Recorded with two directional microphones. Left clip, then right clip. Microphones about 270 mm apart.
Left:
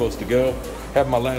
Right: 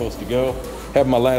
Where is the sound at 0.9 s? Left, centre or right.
Right.